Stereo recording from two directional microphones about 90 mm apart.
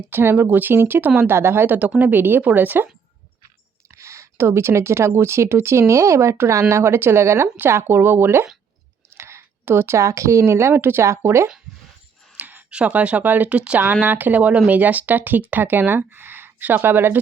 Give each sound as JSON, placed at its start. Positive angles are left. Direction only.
{"t": 0.1, "sound": "speech", "side_deg": -25}
{"t": 3.9, "sound": "speech", "side_deg": -35}
{"t": 12.3, "sound": "speech", "side_deg": -20}